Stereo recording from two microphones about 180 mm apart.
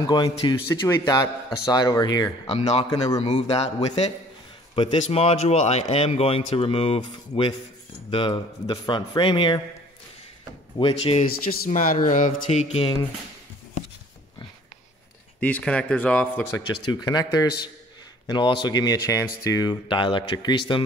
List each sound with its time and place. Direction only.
0.0 s speech: 25° left (ahead or behind)
2.4 s a man's voice: 35° left (ahead or behind)
10.8 s a man's voice: 30° left (ahead or behind)
11.4 s speech: 50° left (ahead or behind); by 12.9 s 35° left (ahead or behind)
15.4 s speech: 5° left (ahead or behind)
16.9 s speech: 20° left (ahead or behind)